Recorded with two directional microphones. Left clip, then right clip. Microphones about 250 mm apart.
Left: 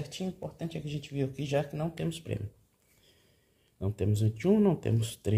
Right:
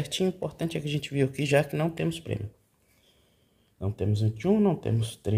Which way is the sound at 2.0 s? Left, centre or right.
Centre.